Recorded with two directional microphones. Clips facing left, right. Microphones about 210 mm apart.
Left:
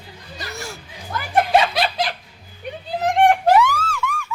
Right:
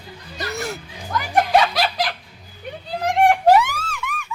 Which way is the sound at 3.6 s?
20° right (ahead or behind).